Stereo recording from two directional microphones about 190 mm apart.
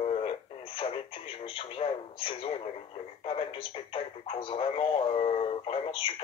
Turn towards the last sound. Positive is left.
turn(degrees=30)  # may be behind; listen again after turning